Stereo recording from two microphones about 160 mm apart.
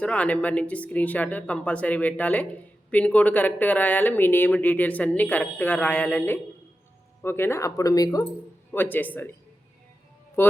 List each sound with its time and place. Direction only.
0.0 s speech: 10° left (ahead or behind)
10.4 s music: 15° left (ahead or behind)